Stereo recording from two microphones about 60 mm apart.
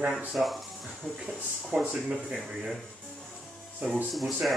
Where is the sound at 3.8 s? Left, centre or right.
Right.